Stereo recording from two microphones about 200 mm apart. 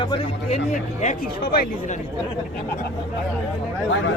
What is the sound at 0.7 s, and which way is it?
Speech, 40° left (ahead or behind).